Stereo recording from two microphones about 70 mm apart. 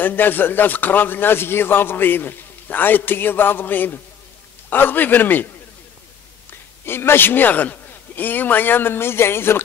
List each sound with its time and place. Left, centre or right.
0.0 s speech: left
6.9 s speech: left